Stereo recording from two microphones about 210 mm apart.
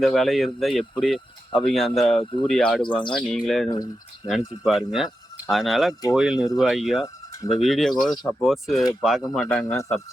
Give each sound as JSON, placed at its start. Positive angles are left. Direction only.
{"t": 0.0, "sound": "speech", "side_deg": 0}
{"t": 2.8, "sound": "speech", "side_deg": 25}
{"t": 3.1, "sound": "speech", "side_deg": 5}
{"t": 8.1, "sound": "speech", "side_deg": 20}
{"t": 8.4, "sound": "speech", "side_deg": 0}